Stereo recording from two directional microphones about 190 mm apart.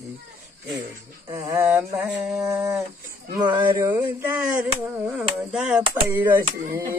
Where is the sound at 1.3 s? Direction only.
15° right (ahead or behind).